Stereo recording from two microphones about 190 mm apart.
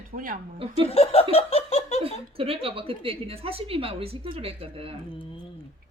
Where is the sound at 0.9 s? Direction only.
30° left (ahead or behind).